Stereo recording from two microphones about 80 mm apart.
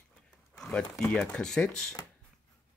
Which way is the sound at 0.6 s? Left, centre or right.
Centre.